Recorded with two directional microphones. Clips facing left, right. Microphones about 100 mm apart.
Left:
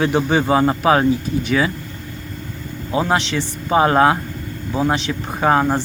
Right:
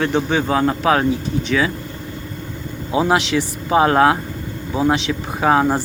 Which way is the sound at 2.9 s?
10° right (ahead or behind).